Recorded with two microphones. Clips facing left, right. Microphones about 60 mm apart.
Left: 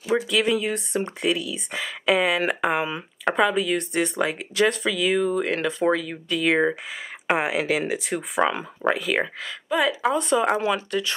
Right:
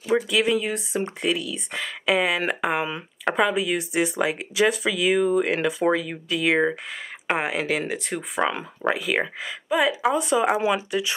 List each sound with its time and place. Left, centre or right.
0.0 s speech: centre